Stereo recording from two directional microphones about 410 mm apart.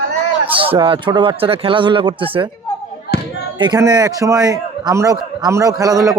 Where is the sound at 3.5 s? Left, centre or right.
Centre.